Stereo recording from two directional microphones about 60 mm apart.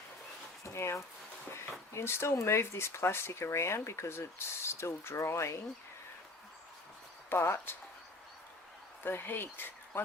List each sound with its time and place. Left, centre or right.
0.6 s a sound: left
1.9 s speech: left
7.3 s speech: left
9.0 s speech: left